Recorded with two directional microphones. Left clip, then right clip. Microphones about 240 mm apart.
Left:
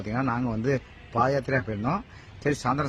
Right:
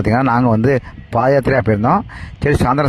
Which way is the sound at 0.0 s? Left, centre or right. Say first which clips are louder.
Right 14 dB; right.